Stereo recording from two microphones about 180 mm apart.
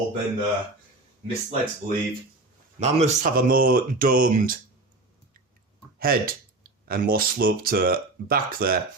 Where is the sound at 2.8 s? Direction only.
35° right (ahead or behind).